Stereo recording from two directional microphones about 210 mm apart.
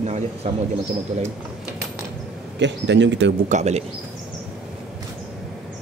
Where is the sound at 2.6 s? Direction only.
60° right (ahead or behind).